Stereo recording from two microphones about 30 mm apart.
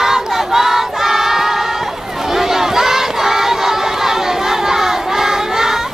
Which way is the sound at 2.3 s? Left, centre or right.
Centre.